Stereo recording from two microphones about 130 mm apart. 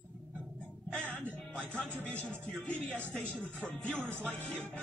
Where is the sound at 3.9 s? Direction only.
15° right (ahead or behind).